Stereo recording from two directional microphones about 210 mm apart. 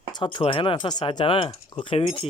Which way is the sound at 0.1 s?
20° left (ahead or behind).